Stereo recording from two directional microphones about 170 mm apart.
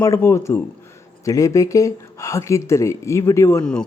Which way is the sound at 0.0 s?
15° left (ahead or behind).